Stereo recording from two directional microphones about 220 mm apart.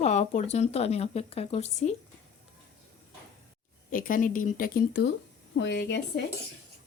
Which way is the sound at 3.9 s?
40° left (ahead or behind).